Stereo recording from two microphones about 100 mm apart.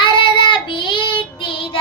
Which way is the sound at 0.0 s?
55° left (ahead or behind).